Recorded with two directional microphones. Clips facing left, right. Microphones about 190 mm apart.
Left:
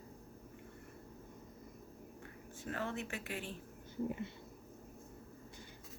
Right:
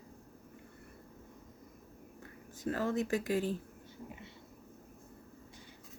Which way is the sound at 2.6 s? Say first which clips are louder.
Right 8 dB; 40° right (ahead or behind).